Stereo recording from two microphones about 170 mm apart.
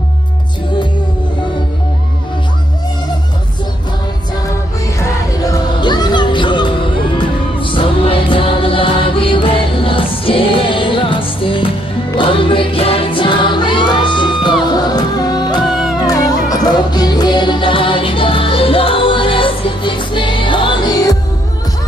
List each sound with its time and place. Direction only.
5.5 s music: 25° left (ahead or behind)
15.6 s music: centre (ahead or behind)
16.0 s music: 20° left (ahead or behind)